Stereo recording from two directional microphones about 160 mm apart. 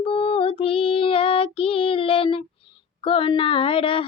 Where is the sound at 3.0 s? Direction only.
35° left (ahead or behind).